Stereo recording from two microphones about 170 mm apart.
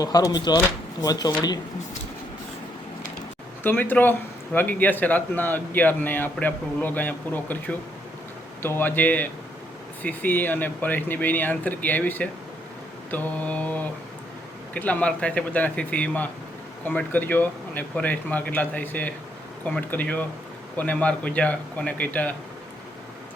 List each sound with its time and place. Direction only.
0.0 s speech: 20° left (ahead or behind)
3.6 s a man's voice: 10° left (ahead or behind)